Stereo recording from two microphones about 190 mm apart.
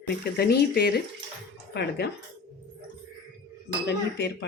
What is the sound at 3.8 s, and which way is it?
Speech, 65° left (ahead or behind).